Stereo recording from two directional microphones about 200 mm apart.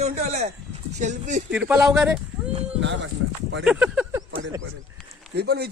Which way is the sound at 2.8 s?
65° right (ahead or behind).